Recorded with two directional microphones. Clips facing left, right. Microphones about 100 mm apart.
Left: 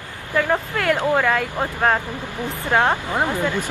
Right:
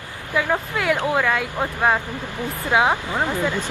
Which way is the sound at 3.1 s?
15° left (ahead or behind).